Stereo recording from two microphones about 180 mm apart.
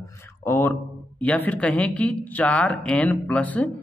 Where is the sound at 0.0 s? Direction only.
10° left (ahead or behind).